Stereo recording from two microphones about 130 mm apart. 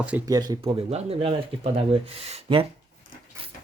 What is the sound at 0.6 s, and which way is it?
Speech, 50° right (ahead or behind).